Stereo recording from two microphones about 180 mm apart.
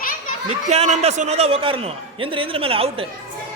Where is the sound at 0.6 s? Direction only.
40° right (ahead or behind).